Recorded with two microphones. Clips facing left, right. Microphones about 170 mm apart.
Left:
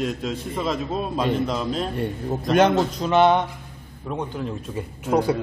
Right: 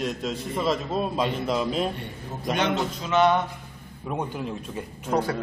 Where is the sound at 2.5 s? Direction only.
45° left (ahead or behind).